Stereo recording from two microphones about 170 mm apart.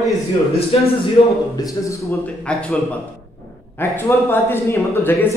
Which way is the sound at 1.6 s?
20° left (ahead or behind).